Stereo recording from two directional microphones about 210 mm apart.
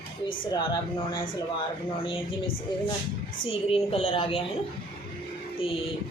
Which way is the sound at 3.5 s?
25° left (ahead or behind).